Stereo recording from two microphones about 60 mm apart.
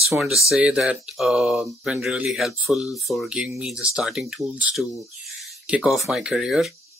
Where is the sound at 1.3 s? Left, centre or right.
Centre.